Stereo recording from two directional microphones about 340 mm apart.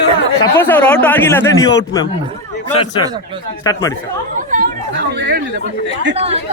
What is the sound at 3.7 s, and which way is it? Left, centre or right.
Speech, centre.